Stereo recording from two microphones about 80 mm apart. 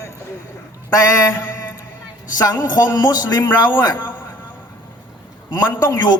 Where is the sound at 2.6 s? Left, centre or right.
Left.